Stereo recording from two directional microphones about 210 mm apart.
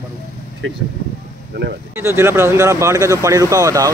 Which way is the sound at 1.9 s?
10° right (ahead or behind).